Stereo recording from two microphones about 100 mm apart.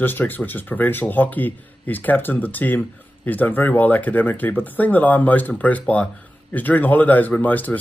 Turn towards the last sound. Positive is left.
turn(degrees=15)  # may be behind; listen again after turning